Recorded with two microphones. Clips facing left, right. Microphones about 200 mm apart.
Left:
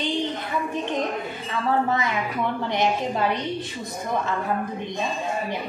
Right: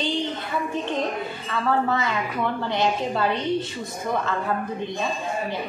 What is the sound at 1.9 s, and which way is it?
Speech, 15° left (ahead or behind).